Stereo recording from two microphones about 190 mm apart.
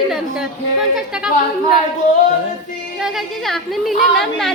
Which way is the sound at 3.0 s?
Centre (ahead or behind).